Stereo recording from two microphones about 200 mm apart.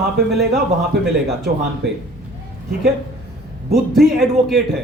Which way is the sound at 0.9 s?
55° right (ahead or behind).